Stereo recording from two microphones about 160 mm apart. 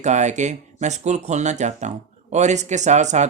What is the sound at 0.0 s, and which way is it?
Speech, 45° right (ahead or behind).